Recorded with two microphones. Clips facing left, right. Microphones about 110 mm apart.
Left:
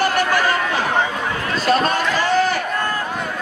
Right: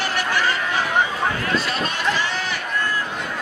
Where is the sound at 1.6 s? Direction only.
45° left (ahead or behind).